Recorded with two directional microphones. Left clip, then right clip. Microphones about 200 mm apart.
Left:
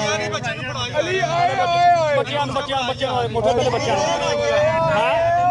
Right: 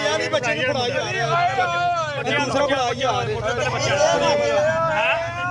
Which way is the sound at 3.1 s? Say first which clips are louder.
Left 5 dB; 30° left (ahead or behind).